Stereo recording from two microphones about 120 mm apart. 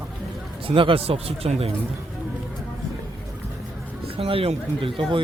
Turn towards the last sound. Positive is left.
turn(degrees=-45)  # may be behind; listen again after turning